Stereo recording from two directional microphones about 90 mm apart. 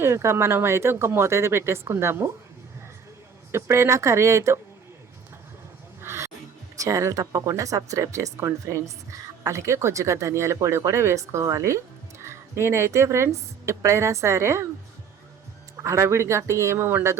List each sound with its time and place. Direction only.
0.0 s speech: 30° right (ahead or behind)
3.5 s a woman's voice: 30° right (ahead or behind)
6.0 s music: 30° right (ahead or behind)
6.7 s a woman's voice: 35° right (ahead or behind)
15.8 s a woman's voice: 35° right (ahead or behind)